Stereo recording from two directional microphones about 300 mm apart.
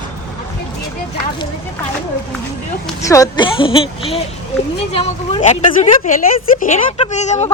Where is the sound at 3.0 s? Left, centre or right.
Centre.